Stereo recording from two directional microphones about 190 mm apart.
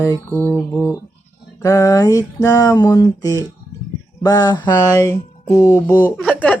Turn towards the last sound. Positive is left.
turn(degrees=5)  # may be behind; listen again after turning